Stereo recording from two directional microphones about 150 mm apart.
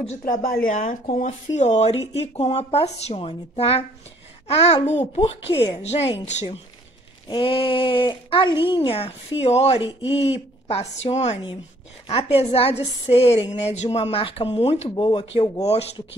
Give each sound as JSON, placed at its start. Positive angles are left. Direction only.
{"t": 0.2, "sound": "speech", "side_deg": 70}
{"t": 0.7, "sound": "speech", "side_deg": 55}
{"t": 7.2, "sound": "a woman's voice", "side_deg": 35}